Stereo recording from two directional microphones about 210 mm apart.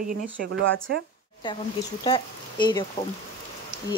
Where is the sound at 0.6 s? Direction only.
65° right (ahead or behind).